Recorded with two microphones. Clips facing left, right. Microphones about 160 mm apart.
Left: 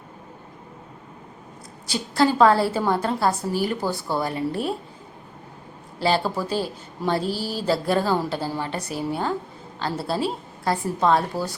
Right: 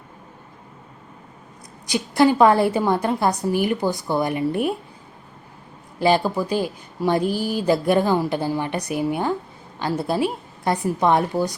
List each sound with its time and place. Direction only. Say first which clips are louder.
1.9 s a woman's voice: right 3 dB; 15° right (ahead or behind)
6.0 s a woman's voice: right 4 dB; 15° right (ahead or behind)